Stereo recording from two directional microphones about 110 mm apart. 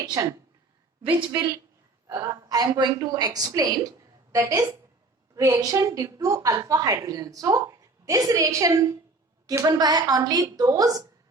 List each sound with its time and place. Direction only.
0.0 s speech: 35° right (ahead or behind)
2.0 s a woman's voice: 35° right (ahead or behind)